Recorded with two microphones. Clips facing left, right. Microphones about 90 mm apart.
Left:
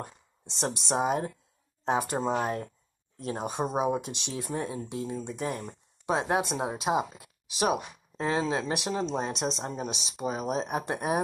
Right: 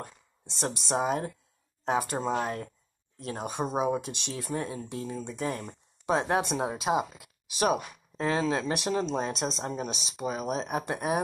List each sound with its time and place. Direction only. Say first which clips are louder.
0.0 s speech: left 2 dB; 20° left (ahead or behind)